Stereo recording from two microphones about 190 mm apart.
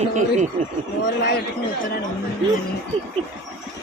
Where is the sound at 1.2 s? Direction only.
60° left (ahead or behind).